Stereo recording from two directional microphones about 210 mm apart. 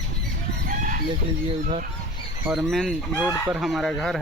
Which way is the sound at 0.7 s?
40° right (ahead or behind).